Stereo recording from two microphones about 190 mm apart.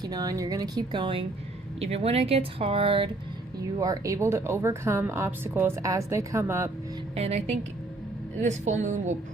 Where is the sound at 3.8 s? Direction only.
15° right (ahead or behind).